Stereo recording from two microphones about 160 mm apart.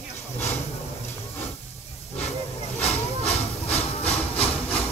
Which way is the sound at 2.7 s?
40° left (ahead or behind).